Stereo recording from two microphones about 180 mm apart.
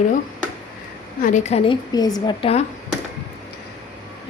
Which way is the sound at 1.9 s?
20° left (ahead or behind).